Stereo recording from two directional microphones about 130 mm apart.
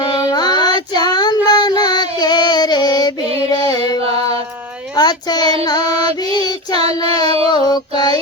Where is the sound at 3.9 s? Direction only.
50° right (ahead or behind).